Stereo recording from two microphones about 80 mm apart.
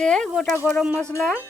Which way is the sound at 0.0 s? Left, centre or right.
Centre.